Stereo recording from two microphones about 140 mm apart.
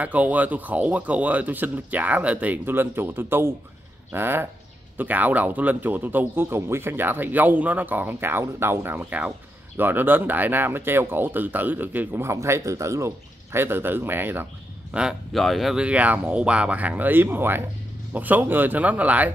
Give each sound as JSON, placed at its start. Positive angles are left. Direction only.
{"t": 0.0, "sound": "speech", "side_deg": -10}